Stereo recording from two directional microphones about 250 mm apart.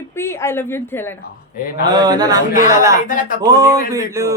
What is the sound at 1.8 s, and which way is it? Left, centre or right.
Speech, centre.